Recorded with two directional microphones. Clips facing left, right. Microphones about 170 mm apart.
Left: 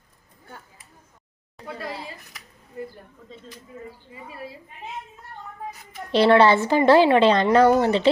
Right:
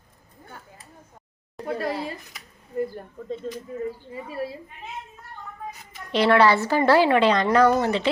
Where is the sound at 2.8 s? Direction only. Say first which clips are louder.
Right 8 dB; 45° right (ahead or behind).